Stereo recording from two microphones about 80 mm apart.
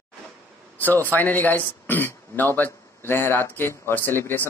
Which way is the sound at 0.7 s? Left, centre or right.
Left.